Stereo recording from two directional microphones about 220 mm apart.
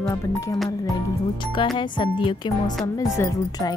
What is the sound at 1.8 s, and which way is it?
Speech, 20° left (ahead or behind).